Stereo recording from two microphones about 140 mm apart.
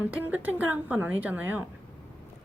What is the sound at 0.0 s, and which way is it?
Speech, 10° right (ahead or behind).